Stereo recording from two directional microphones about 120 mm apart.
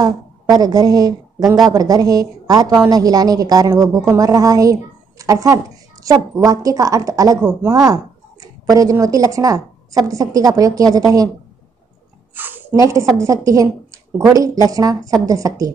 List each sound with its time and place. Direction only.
0.0 s a woman's voice: 35° right (ahead or behind)
12.4 s a sound: 15° right (ahead or behind)
12.7 s a woman's voice: 25° right (ahead or behind)